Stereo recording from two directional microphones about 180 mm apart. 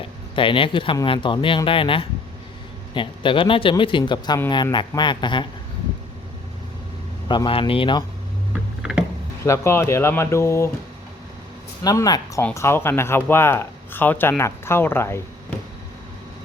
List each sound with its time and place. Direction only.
0.3 s speech: 30° left (ahead or behind)
7.3 s speech: 25° left (ahead or behind)
8.8 s a sound: 5° right (ahead or behind)
9.4 s speech: 15° left (ahead or behind)
11.8 s speech: 20° left (ahead or behind)